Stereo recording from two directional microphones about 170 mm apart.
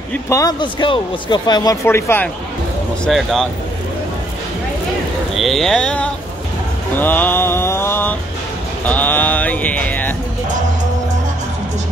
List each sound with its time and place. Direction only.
0.1 s a man's voice: 15° left (ahead or behind)
3.1 s speech: centre (ahead or behind)
5.3 s speech: centre (ahead or behind)